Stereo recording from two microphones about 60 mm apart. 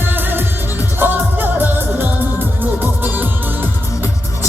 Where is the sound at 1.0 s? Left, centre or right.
Right.